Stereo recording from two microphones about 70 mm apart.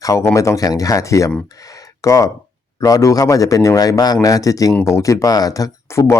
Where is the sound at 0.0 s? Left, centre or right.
Left.